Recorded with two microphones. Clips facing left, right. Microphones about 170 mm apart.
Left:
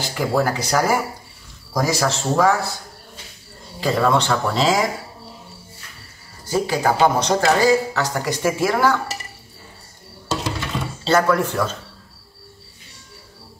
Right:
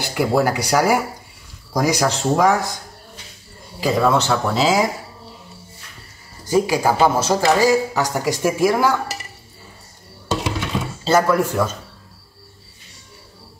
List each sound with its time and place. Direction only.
0.0 s speech: 10° right (ahead or behind)
3.8 s speech: 5° right (ahead or behind)
6.4 s speech: 15° right (ahead or behind)
11.1 s speech: 10° right (ahead or behind)